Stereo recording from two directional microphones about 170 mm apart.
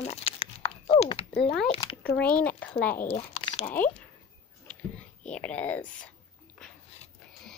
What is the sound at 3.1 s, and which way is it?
Crumpling, 35° left (ahead or behind).